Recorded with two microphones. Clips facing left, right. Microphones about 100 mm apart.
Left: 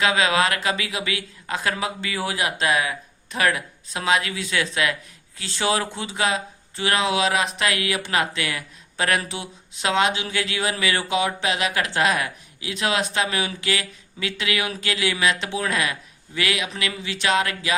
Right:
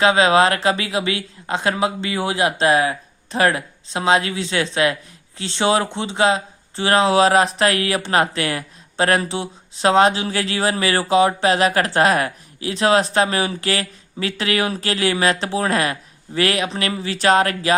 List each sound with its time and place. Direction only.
0.0 s speech: 30° right (ahead or behind)